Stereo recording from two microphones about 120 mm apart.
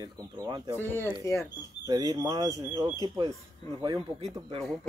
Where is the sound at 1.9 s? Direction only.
30° right (ahead or behind).